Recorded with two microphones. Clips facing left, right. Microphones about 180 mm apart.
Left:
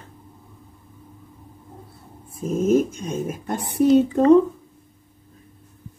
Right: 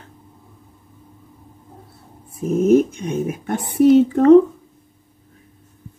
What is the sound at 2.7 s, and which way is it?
Speech, 65° right (ahead or behind).